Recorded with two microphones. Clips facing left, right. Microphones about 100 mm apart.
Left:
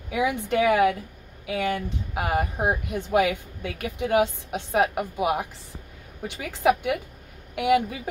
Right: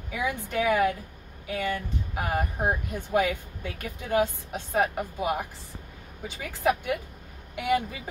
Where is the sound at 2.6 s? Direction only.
80° left.